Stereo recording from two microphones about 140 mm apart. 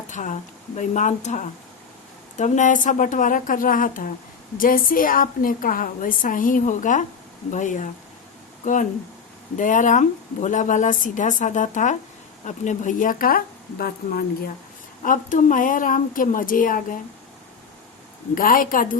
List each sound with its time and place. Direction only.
0.1 s a woman's voice: 65° left (ahead or behind); by 14.5 s 90° left
15.0 s a woman's voice: 70° left (ahead or behind)
18.3 s speech: 85° left